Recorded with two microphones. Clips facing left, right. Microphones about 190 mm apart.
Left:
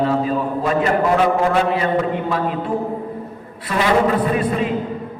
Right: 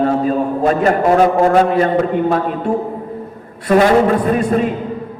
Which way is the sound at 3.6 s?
45° right (ahead or behind).